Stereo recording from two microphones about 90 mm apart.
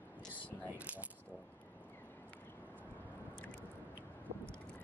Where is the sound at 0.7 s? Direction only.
15° right (ahead or behind).